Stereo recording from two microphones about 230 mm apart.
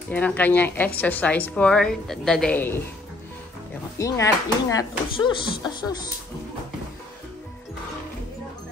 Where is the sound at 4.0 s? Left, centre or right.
Centre.